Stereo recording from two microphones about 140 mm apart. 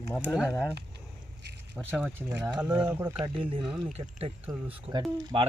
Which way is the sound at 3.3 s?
40° right (ahead or behind).